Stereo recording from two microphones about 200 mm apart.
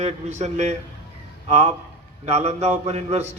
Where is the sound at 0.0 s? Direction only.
35° right (ahead or behind).